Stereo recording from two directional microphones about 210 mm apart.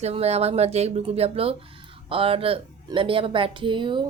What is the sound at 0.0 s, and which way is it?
A woman's voice, 30° right (ahead or behind).